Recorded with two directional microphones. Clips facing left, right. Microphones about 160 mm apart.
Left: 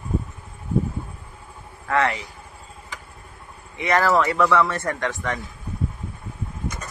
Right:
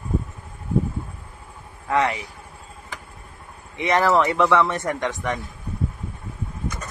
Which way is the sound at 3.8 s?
20° right (ahead or behind).